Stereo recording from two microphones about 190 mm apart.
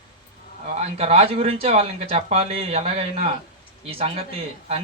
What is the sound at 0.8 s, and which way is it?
Speech, 35° right (ahead or behind).